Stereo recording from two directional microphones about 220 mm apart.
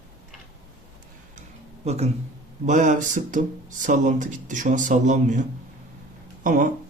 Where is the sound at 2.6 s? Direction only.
35° right (ahead or behind).